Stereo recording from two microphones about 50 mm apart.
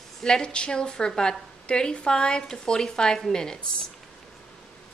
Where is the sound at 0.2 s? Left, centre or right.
Centre.